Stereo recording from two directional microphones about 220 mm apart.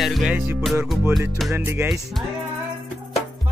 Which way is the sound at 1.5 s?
10° right (ahead or behind).